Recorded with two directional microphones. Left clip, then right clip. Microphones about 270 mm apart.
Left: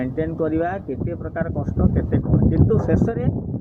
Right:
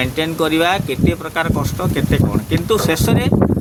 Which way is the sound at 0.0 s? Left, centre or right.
Centre.